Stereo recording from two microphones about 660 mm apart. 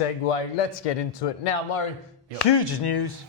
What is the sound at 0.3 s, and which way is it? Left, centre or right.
Speech, left.